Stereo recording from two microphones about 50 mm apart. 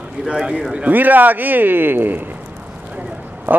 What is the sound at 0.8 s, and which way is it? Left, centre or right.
A man's voice, right.